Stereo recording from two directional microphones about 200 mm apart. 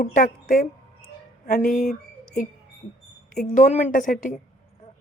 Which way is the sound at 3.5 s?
35° left (ahead or behind).